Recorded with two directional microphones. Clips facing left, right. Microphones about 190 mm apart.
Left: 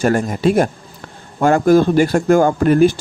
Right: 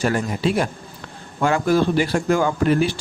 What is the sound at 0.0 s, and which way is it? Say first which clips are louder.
Speech: left 6 dB; 50° left (ahead or behind).